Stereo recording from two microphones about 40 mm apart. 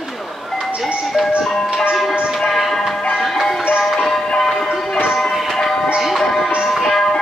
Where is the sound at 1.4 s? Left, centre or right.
Centre.